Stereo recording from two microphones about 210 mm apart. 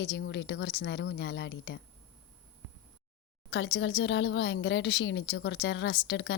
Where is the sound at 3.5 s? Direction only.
60° left (ahead or behind).